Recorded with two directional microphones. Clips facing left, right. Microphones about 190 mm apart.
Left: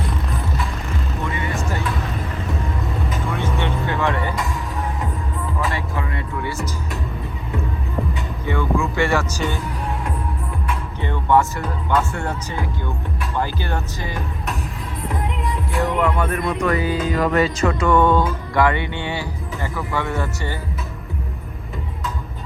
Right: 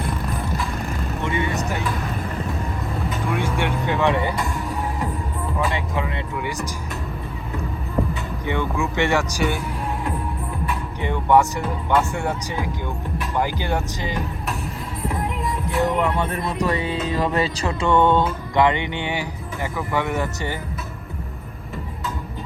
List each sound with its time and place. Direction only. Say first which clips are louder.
1.2 s vehicle: right 4 dB; 25° right (ahead or behind)
3.2 s vehicle: right 2 dB; 10° right (ahead or behind)
5.7 s music: right 1 dB; 20° right (ahead or behind)
8.4 s music: left 2 dB; 20° right (ahead or behind)
11.0 s speech: right 1 dB; 15° right (ahead or behind)
15.0 s music: even; centre (ahead or behind)
16.1 s music: left 2 dB; 30° right (ahead or behind)